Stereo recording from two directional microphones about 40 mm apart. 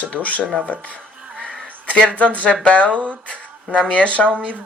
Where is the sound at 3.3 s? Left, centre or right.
Left.